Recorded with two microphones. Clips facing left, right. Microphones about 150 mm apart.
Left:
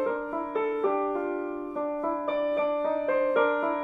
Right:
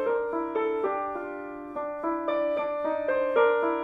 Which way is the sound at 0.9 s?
10° left (ahead or behind).